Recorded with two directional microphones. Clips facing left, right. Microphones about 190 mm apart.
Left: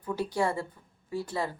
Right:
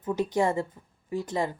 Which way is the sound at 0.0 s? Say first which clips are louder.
Right 4 dB; 20° right (ahead or behind).